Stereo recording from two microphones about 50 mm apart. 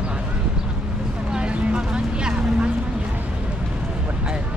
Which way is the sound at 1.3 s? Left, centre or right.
Centre.